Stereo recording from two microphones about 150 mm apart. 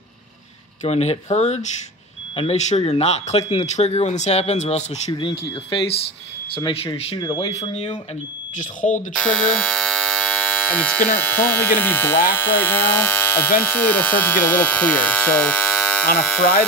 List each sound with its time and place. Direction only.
0.8 s speech: 45° left (ahead or behind)
7.2 s speech: 25° left (ahead or behind)
7.6 s speech: 45° left (ahead or behind)
8.5 s speech: 60° left (ahead or behind)
9.1 s speech: 5° left (ahead or behind)